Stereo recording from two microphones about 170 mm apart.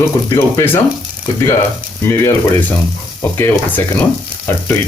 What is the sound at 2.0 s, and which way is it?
Speech, 10° left (ahead or behind).